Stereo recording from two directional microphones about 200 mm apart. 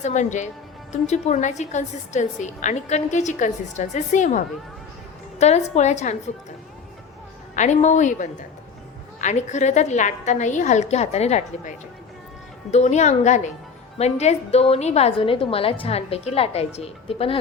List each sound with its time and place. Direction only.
0.0 s a woman's voice: 35° left (ahead or behind)
7.5 s a woman's voice: 35° left (ahead or behind)
12.7 s a woman's voice: 35° left (ahead or behind)